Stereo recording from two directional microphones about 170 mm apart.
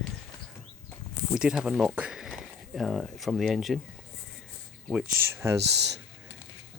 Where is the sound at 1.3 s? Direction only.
5° right (ahead or behind).